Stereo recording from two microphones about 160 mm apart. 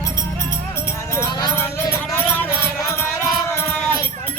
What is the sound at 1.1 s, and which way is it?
Music, 20° left (ahead or behind).